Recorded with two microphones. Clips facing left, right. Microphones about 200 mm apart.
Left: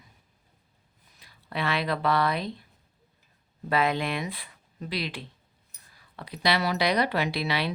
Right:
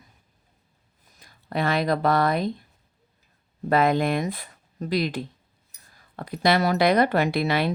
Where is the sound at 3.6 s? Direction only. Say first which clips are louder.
Right 6 dB; 45° right (ahead or behind).